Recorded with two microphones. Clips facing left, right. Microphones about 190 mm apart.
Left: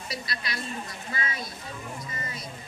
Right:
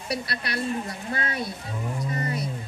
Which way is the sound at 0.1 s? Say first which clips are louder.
Right 7 dB; 65° right (ahead or behind).